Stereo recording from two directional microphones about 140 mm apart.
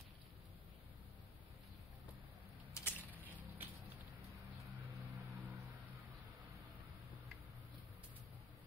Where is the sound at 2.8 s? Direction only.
15° left (ahead or behind).